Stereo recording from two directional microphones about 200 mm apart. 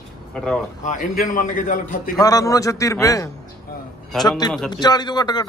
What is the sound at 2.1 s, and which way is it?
A man's voice, 15° left (ahead or behind).